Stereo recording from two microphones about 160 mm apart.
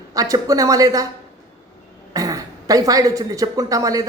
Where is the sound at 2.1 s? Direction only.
20° right (ahead or behind).